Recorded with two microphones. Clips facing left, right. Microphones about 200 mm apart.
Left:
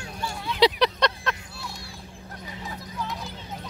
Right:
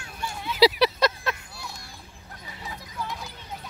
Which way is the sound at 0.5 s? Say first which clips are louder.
Right 1 dB; 5° right (ahead or behind).